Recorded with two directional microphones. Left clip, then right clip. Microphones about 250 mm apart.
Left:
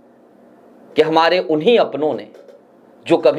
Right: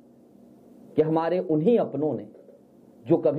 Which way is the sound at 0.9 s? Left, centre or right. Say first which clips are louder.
Left 10 dB; centre.